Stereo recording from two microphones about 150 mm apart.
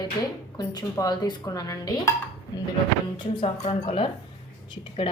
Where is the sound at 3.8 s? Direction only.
40° left (ahead or behind).